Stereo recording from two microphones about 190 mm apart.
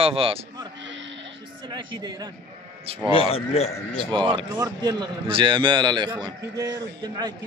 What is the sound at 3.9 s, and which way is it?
A man's voice, 25° right (ahead or behind).